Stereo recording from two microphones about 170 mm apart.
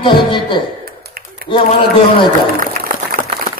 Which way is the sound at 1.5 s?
30° left (ahead or behind).